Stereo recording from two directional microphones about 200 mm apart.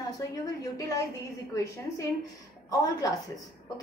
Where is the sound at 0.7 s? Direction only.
15° left (ahead or behind).